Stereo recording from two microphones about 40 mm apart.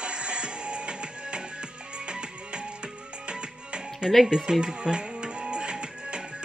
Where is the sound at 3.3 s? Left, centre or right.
Right.